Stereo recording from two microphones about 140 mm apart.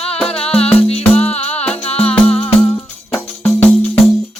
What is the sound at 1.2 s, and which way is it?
Music, 50° left (ahead or behind).